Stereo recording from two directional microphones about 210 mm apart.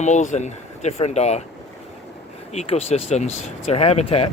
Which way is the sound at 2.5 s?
30° left (ahead or behind).